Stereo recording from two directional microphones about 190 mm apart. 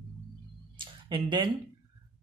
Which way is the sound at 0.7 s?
25° right (ahead or behind).